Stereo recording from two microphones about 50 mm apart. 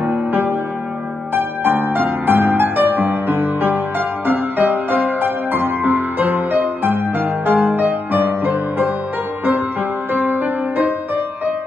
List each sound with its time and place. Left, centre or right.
0.0 s music: right
10.1 s music: right